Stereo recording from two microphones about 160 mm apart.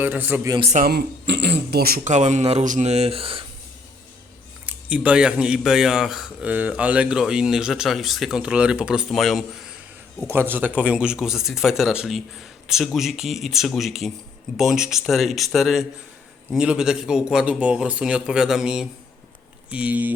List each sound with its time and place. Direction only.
0.0 s a man's voice: 10° right (ahead or behind)
0.6 s speech: 45° right (ahead or behind)
0.9 s speech: 90° right
2.0 s speech: 45° right (ahead or behind)
4.6 s speech: 10° right (ahead or behind)
10.2 s a man's voice: 15° right (ahead or behind)